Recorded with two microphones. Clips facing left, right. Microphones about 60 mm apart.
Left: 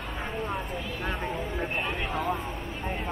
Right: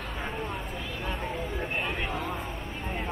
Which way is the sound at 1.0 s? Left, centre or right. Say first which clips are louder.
Left 1 dB; centre.